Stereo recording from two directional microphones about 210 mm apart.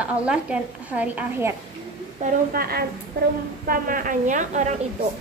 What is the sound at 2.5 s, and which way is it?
A woman's voice, 45° right (ahead or behind).